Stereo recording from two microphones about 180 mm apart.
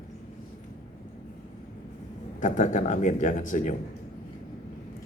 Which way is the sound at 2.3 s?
45° left (ahead or behind).